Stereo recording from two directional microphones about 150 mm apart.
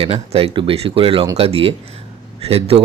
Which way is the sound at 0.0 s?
40° right (ahead or behind).